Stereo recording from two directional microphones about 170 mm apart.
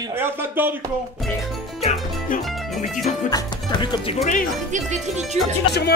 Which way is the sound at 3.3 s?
25° left (ahead or behind).